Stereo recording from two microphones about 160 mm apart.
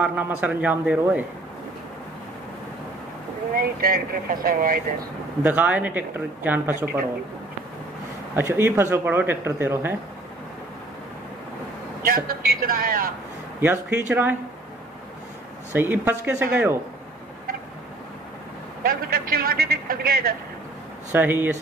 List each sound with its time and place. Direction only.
0.0 s speech: 10° right (ahead or behind)
3.5 s speech: 65° right (ahead or behind)
5.4 s speech: 10° right (ahead or behind)
8.4 s speech: 15° right (ahead or behind)
12.0 s a man's voice: 65° right (ahead or behind)
13.6 s speech: 15° right (ahead or behind)
15.7 s speech: 15° right (ahead or behind)
18.8 s a man's voice: 65° right (ahead or behind)
21.1 s speech: 15° right (ahead or behind)